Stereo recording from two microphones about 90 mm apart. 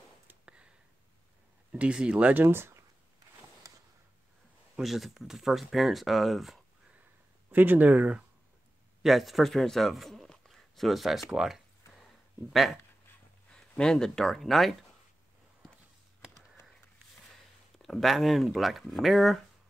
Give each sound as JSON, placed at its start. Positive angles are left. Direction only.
{"t": 0.3, "sound": "a sound", "side_deg": -10}
{"t": 1.7, "sound": "speech", "side_deg": -10}
{"t": 4.7, "sound": "speech", "side_deg": -5}
{"t": 7.5, "sound": "speech", "side_deg": -20}
{"t": 9.0, "sound": "speech", "side_deg": 0}
{"t": 13.5, "sound": "speech", "side_deg": 10}
{"t": 17.7, "sound": "speech", "side_deg": 0}